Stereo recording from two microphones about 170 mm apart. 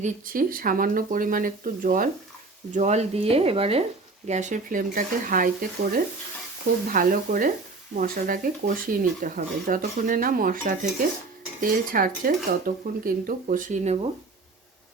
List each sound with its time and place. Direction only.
0.0 s speech: 55° right (ahead or behind)
2.7 s speech: 40° right (ahead or behind)
4.3 s speech: 45° right (ahead or behind)